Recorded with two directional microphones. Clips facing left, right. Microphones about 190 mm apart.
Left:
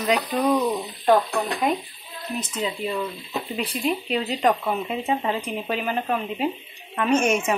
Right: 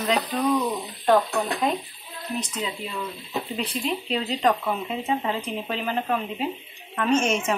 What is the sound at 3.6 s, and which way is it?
Speech, 10° left (ahead or behind).